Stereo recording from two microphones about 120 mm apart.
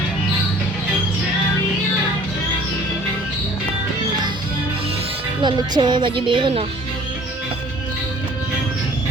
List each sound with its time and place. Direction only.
5.4 s speech: 40° right (ahead or behind)